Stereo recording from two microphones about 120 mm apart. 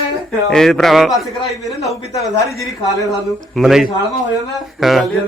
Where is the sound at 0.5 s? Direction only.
5° left (ahead or behind).